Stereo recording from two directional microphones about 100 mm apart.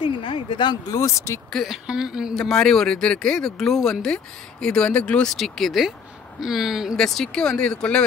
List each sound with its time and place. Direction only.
0.0 s speech: 55° left (ahead or behind)
0.9 s speech: 30° left (ahead or behind)
1.5 s speech: centre (ahead or behind)
2.3 s speech: 5° left (ahead or behind)
7.0 s speech: 5° left (ahead or behind)